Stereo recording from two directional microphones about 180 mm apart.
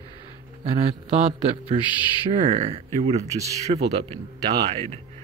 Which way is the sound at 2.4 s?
30° right (ahead or behind).